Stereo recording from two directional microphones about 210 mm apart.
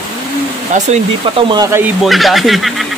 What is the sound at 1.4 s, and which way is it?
Speech, 20° right (ahead or behind).